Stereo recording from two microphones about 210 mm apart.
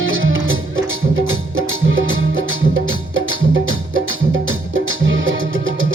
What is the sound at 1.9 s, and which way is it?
Music, 70° right (ahead or behind).